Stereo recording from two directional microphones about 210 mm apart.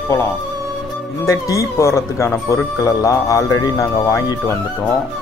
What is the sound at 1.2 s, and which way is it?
Speech, 15° left (ahead or behind).